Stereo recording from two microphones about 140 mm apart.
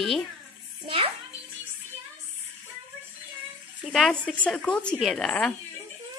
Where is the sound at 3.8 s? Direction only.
Centre (ahead or behind).